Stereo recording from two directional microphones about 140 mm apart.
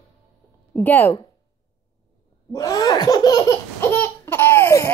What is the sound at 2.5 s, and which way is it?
Laughter, 25° left (ahead or behind).